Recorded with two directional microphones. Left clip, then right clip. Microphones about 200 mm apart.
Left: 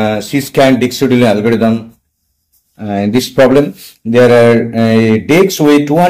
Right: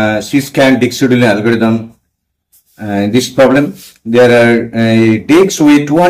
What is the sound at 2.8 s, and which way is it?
Speech, 35° left (ahead or behind).